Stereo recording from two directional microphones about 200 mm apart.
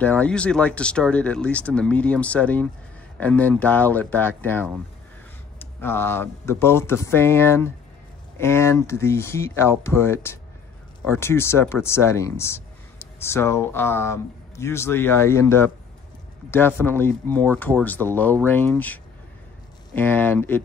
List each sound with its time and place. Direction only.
0.0 s speech: 5° left (ahead or behind)